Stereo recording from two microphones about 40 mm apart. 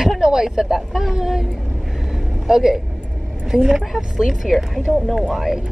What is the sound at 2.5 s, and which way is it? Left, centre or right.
Speech, centre.